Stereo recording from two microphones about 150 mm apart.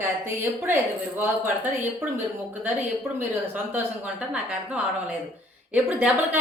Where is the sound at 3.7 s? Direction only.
5° right (ahead or behind).